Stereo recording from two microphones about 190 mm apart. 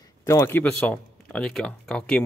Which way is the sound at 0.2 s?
15° left (ahead or behind).